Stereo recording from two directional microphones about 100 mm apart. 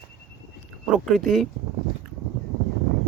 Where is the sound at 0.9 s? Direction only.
Centre (ahead or behind).